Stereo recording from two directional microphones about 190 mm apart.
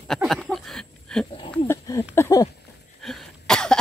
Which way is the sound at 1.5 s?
15° left (ahead or behind).